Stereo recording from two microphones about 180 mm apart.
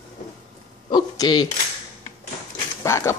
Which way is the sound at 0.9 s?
20° left (ahead or behind).